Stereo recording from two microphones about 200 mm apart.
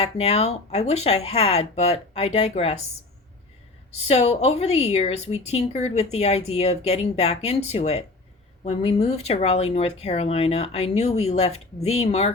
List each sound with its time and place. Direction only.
0.0 s a woman's voice: 30° left (ahead or behind)
3.9 s a woman's voice: 30° left (ahead or behind)